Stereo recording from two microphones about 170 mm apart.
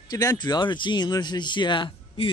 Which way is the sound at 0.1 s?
20° left (ahead or behind).